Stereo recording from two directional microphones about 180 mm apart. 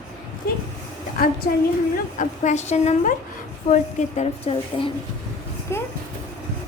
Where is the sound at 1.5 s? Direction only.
50° left (ahead or behind); by 4.9 s 35° left (ahead or behind).